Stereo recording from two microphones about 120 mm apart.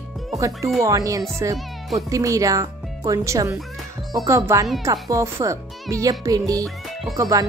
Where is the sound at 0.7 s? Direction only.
25° right (ahead or behind).